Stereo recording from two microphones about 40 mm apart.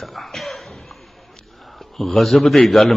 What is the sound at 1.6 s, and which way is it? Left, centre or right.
A man's voice, centre.